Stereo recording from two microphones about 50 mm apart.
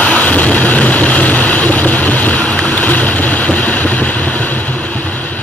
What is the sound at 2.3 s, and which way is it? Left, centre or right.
Boat, centre.